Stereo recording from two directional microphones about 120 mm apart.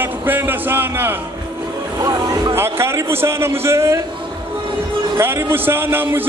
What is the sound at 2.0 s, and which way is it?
Music, 30° right (ahead or behind).